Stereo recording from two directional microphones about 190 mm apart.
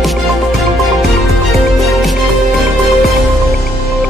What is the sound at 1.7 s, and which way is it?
Music, centre (ahead or behind).